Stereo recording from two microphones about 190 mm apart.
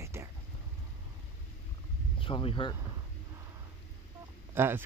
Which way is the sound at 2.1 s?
25° left (ahead or behind).